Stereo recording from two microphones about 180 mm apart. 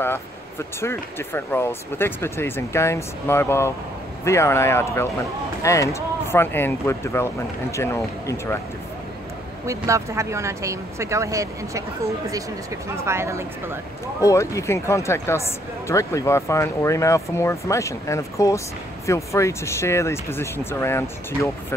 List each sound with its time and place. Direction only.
0.0 s speech: 15° left (ahead or behind)
9.7 s speech: 15° right (ahead or behind)
12.9 s speech: 15° right (ahead or behind)
14.2 s speech: 15° left (ahead or behind)